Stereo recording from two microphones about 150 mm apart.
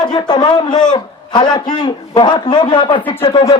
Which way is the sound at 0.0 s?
30° left (ahead or behind).